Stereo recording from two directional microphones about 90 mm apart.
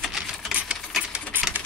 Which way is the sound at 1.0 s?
10° right (ahead or behind).